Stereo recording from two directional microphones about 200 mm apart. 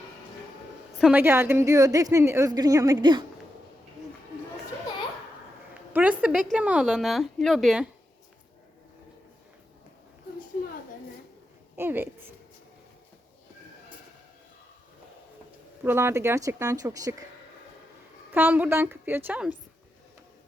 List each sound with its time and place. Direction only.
0.9 s a woman's voice: 5° right (ahead or behind); by 3.2 s 20° right (ahead or behind)
5.9 s a woman's voice: 5° right (ahead or behind)
11.8 s a woman's voice: 10° right (ahead or behind)
15.8 s a woman's voice: 10° right (ahead or behind)
18.3 s a woman's voice: 10° right (ahead or behind)